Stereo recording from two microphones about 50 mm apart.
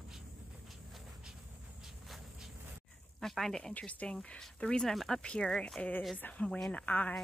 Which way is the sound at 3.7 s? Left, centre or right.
Left.